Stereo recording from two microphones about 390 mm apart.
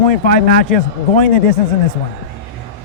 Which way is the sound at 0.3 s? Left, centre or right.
Left.